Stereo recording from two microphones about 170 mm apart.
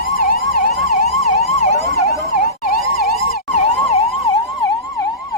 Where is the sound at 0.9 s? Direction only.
45° left (ahead or behind).